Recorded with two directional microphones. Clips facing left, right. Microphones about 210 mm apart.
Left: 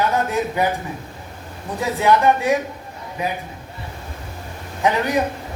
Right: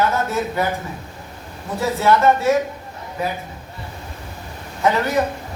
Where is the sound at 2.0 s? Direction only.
15° left (ahead or behind).